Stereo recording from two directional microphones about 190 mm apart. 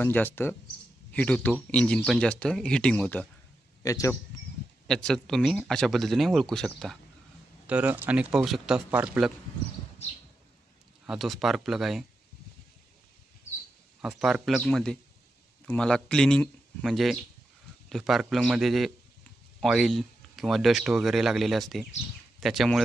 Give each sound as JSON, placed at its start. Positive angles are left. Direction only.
{"t": 0.0, "sound": "speech", "side_deg": 10}
{"t": 4.8, "sound": "speech", "side_deg": 5}
{"t": 7.6, "sound": "speech", "side_deg": -10}
{"t": 11.1, "sound": "speech", "side_deg": 0}
{"t": 14.0, "sound": "speech", "side_deg": 0}